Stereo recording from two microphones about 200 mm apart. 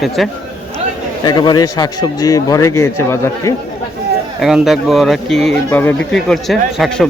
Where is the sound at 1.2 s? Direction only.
20° left (ahead or behind).